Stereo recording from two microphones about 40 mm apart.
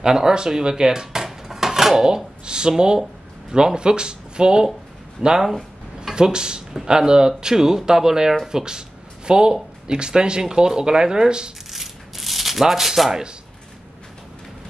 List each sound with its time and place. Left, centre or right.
0.0 s speech: centre
11.7 s rub: centre